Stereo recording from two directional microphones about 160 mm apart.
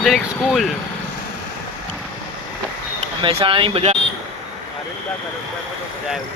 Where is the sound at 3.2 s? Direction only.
35° right (ahead or behind).